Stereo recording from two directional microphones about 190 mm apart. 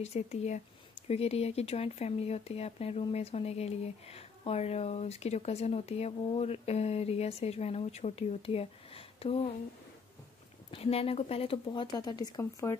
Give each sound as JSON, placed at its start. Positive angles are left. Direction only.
{"t": 0.0, "sound": "speech", "side_deg": 35}
{"t": 10.7, "sound": "speech", "side_deg": 30}